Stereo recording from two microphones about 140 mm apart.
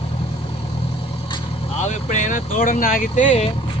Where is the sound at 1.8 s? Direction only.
60° left (ahead or behind).